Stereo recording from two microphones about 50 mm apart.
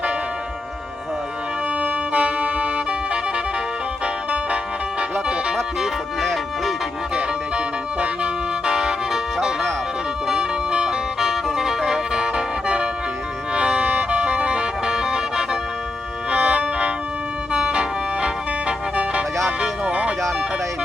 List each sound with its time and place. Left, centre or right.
1.8 s music: right
5.8 s music: centre
7.2 s music: centre
16.3 s music: right
19.6 s music: right